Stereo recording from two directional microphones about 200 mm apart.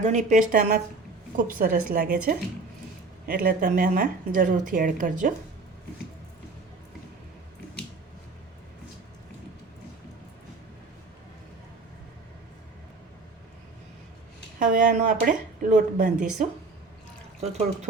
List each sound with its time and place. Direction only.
0.0 s a woman's voice: 35° right (ahead or behind)
14.6 s speech: 40° right (ahead or behind)